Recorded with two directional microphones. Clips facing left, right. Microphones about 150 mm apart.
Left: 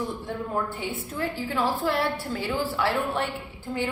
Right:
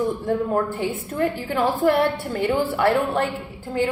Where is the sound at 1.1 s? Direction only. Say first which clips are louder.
Right 5 dB; 60° right (ahead or behind).